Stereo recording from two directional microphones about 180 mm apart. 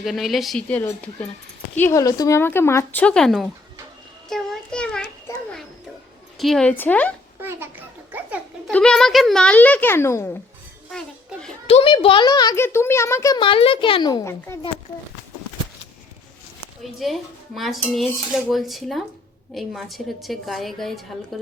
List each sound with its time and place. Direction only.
0.0 s a woman's voice: centre (ahead or behind)
4.3 s child singing: centre (ahead or behind)
6.4 s a woman's voice: centre (ahead or behind)
7.4 s a sound: 10° right (ahead or behind)
8.7 s a woman's voice: 5° left (ahead or behind)
11.7 s a child's voice: 30° left (ahead or behind); by 14.6 s 15° left (ahead or behind)
16.8 s speech: centre (ahead or behind)